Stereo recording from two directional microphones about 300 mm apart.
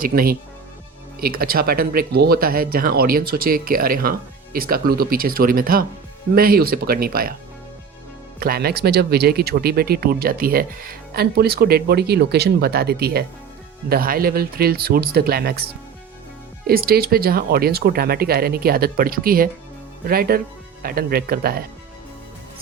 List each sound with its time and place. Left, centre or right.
0.0 s speech: right
8.4 s speech: right
16.6 s speech: right